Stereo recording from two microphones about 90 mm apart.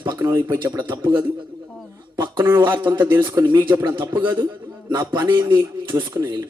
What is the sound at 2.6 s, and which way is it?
Speech, 25° right (ahead or behind).